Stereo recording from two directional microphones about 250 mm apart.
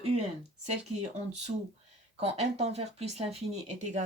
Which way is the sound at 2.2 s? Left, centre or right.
Right.